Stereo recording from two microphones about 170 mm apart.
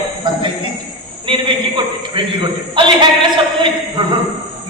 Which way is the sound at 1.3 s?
30° right (ahead or behind).